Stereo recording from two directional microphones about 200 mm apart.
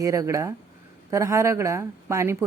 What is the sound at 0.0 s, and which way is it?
A woman's voice, 15° right (ahead or behind).